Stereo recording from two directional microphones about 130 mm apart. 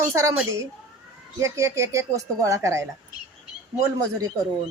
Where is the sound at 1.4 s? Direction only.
25° right (ahead or behind).